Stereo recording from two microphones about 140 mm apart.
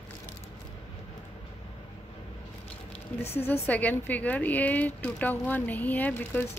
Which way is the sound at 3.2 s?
45° left (ahead or behind).